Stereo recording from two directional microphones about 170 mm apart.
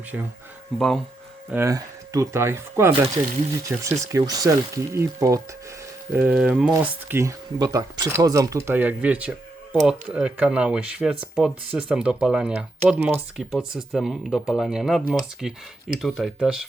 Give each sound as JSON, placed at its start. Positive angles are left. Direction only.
{"t": 0.1, "sound": "speech", "side_deg": -5}
{"t": 1.5, "sound": "speech", "side_deg": -15}
{"t": 7.2, "sound": "speech", "side_deg": -20}